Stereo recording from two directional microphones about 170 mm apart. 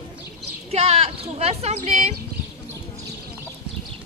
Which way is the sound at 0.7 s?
40° right (ahead or behind).